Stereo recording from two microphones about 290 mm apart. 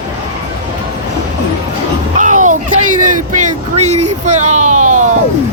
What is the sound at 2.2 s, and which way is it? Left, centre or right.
Music, right.